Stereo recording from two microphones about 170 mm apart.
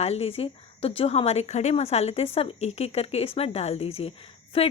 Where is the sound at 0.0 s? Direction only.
35° left (ahead or behind).